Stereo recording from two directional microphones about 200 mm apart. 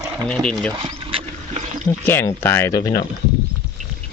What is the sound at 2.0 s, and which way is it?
Speech, 10° left (ahead or behind).